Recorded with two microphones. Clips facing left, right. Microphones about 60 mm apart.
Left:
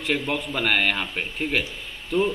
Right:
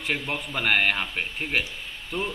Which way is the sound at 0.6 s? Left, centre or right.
Centre.